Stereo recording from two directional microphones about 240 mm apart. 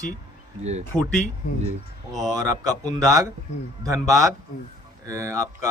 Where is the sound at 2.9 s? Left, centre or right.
Centre.